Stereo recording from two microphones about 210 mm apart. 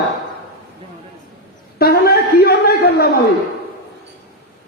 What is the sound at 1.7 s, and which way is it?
A man's voice, 45° left (ahead or behind).